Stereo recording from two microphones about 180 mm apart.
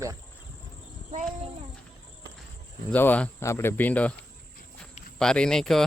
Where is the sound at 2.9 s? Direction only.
10° left (ahead or behind).